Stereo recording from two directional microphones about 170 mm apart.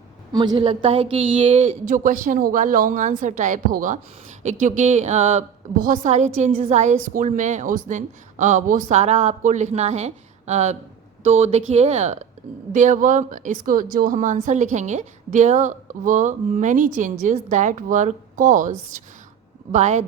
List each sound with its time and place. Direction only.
0.3 s speech: 30° right (ahead or behind)
1.9 s a woman's voice: 50° right (ahead or behind)